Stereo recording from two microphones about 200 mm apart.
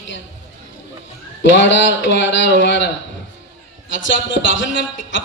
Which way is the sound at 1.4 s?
65° left (ahead or behind).